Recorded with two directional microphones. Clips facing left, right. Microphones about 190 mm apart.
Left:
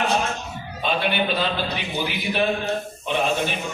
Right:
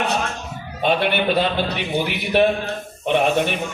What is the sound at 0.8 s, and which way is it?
A man's voice, 65° right (ahead or behind).